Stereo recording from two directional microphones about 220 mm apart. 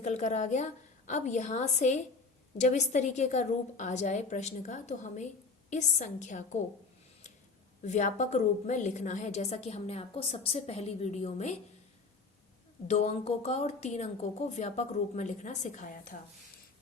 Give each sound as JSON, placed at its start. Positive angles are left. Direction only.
{"t": 0.0, "sound": "a woman's voice", "side_deg": 35}
{"t": 7.9, "sound": "a woman's voice", "side_deg": 35}
{"t": 12.9, "sound": "a woman's voice", "side_deg": 30}